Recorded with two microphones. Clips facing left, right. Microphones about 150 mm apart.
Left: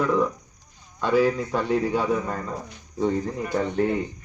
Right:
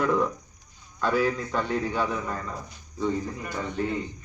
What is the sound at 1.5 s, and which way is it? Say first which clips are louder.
Speech: left 4 dB; 10° left (ahead or behind).